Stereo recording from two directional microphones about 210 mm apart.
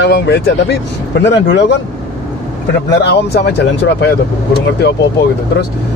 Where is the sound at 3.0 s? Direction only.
55° left (ahead or behind).